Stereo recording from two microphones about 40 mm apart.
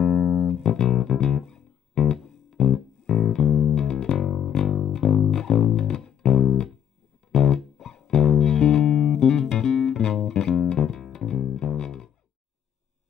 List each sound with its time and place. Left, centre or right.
0.0 s music: centre
3.8 s music: centre